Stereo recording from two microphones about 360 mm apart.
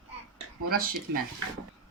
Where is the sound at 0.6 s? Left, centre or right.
Right.